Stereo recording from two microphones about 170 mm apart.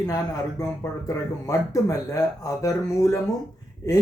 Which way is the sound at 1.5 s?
20° left (ahead or behind).